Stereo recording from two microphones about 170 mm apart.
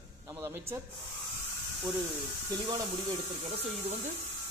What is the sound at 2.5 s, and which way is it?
Speech, 25° right (ahead or behind).